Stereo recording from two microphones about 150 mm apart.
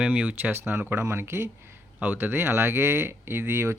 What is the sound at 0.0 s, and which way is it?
Speech, 10° right (ahead or behind).